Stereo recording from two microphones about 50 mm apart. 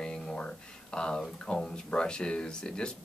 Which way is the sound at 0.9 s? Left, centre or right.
Centre.